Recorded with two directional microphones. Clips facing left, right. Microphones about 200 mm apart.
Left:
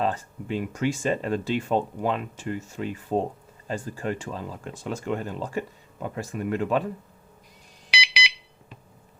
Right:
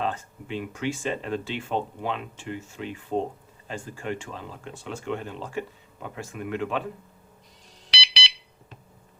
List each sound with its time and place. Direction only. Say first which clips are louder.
0.0 s speech: left 3 dB; 40° left (ahead or behind)
7.9 s alarm: left 4 dB; 10° left (ahead or behind)